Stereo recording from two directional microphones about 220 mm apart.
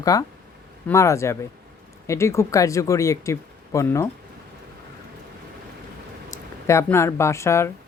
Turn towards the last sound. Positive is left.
turn(degrees=10)  # may be behind; listen again after turning